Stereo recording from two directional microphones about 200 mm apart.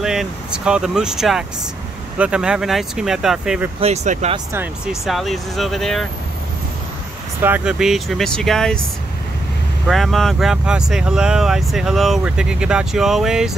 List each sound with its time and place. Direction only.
0.0 s speech: centre (ahead or behind)
3.8 s speech: 35° right (ahead or behind)
4.5 s speech: 5° right (ahead or behind)
7.4 s speech: 5° right (ahead or behind)
9.8 s speech: centre (ahead or behind)